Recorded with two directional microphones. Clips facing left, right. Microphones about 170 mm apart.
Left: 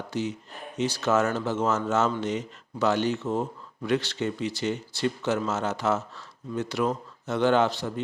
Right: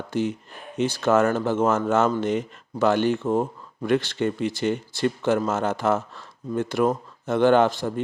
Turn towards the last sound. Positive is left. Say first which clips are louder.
# right 4 dB
turn(degrees=-50)  # may be behind; listen again after turning